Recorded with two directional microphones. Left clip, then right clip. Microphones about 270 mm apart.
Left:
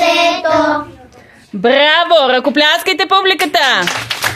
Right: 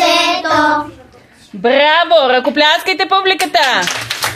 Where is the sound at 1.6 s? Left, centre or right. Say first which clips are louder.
Even; left.